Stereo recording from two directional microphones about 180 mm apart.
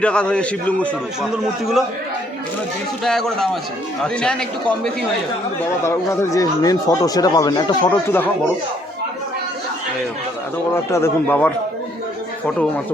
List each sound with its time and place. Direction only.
0.0 s a man's voice: 5° left (ahead or behind)
3.0 s a man's voice: centre (ahead or behind)
5.8 s speech: 15° left (ahead or behind)
7.9 s a man's voice: 10° left (ahead or behind)
10.9 s a man's voice: 10° left (ahead or behind)